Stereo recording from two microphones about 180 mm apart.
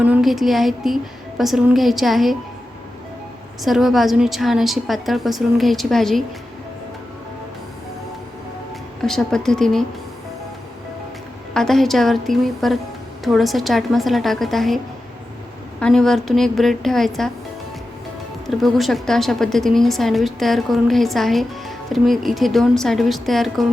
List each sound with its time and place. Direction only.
0.0 s a woman's voice: 5° right (ahead or behind)
3.6 s a woman's voice: centre (ahead or behind)
9.0 s a woman's voice: centre (ahead or behind)
11.5 s a woman's voice: centre (ahead or behind)
15.8 s a woman's voice: 5° left (ahead or behind)
18.4 s a woman's voice: centre (ahead or behind)